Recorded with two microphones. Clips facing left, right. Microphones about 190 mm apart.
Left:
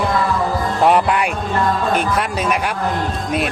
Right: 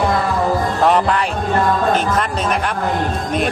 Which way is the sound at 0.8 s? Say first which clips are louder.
Left 2 dB; 10° left (ahead or behind).